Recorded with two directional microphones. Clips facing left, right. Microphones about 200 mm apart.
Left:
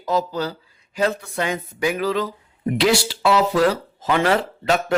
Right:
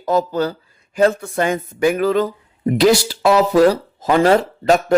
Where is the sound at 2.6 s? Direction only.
40° right (ahead or behind).